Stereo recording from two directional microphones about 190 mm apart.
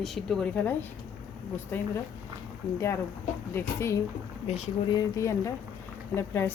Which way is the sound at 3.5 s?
15° left (ahead or behind).